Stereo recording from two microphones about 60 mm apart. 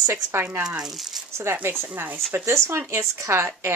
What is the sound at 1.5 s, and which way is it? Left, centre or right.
Speech, right.